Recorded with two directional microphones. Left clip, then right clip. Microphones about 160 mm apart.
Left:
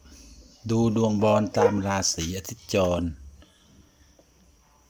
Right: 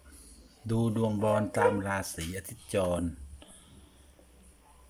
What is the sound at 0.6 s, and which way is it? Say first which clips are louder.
Speech: left 7 dB; 10° left (ahead or behind).